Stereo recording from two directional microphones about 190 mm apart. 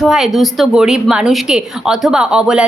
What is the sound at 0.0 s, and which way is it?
A woman's voice, centre (ahead or behind).